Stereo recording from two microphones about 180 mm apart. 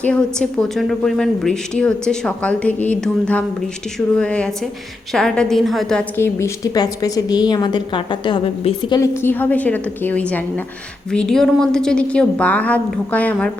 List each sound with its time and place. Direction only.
0.0 s a woman's voice: 5° left (ahead or behind)
6.1 s a woman's voice: 15° left (ahead or behind)
9.2 s a woman's voice: 10° left (ahead or behind)